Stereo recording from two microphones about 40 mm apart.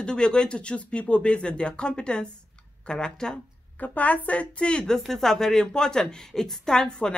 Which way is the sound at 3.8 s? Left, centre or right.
Left.